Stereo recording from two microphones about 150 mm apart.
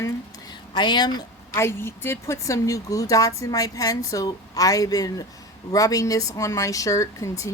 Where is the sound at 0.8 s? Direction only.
30° left (ahead or behind).